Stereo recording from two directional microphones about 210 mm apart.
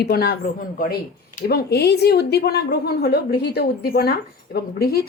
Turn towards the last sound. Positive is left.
turn(degrees=45)  # may be behind; listen again after turning